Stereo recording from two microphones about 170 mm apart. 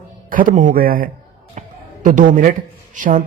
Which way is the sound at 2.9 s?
50° right (ahead or behind).